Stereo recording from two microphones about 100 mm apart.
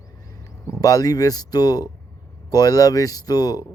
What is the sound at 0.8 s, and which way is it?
Speech, 35° left (ahead or behind).